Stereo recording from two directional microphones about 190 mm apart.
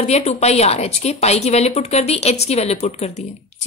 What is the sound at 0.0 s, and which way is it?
Speech, 35° left (ahead or behind).